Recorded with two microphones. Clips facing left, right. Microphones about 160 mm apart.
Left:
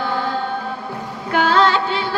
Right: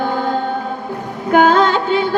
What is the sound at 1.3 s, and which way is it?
Music, 50° right (ahead or behind).